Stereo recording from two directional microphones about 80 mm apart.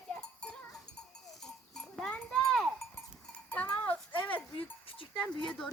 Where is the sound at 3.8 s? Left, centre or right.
Left.